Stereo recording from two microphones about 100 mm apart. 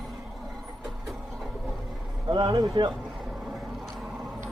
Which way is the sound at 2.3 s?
45° right (ahead or behind).